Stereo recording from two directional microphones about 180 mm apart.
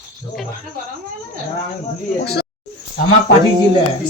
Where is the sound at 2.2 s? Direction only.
65° left (ahead or behind).